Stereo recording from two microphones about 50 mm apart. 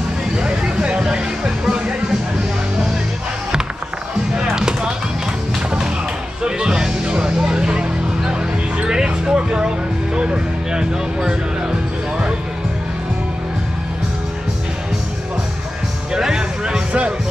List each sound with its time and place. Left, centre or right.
0.4 s music: centre
4.4 s music: centre
6.4 s music: centre
8.8 s a sound: centre
10.1 s music: centre
16.1 s music: centre